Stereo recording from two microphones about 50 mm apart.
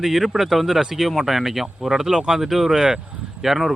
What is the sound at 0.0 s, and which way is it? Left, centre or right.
Speech, centre.